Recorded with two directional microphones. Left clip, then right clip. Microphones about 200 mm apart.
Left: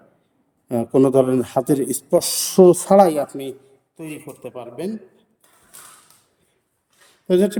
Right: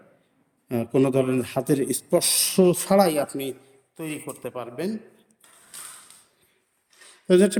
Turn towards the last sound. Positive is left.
turn(degrees=10)  # may be behind; listen again after turning